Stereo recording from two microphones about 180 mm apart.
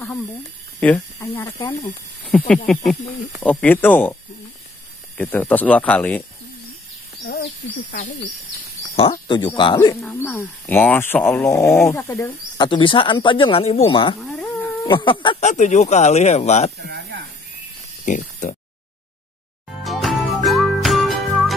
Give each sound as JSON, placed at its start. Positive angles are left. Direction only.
{"t": 0.7, "sound": "speech", "side_deg": 10}
{"t": 2.2, "sound": "speech", "side_deg": 5}
{"t": 7.2, "sound": "speech", "side_deg": 70}
{"t": 8.0, "sound": "speech", "side_deg": 45}
{"t": 8.9, "sound": "speech", "side_deg": 30}
{"t": 10.2, "sound": "speech", "side_deg": 10}
{"t": 12.3, "sound": "speech", "side_deg": 25}
{"t": 15.4, "sound": "speech", "side_deg": 40}
{"t": 16.7, "sound": "a sound", "side_deg": -65}
{"t": 18.0, "sound": "speech", "side_deg": 40}
{"t": 19.8, "sound": "music", "side_deg": 0}